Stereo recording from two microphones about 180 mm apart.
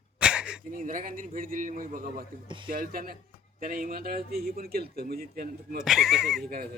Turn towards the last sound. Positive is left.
turn(degrees=0)  # may be behind; listen again after turning